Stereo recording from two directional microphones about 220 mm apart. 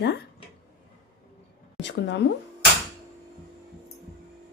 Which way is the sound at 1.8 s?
55° left (ahead or behind).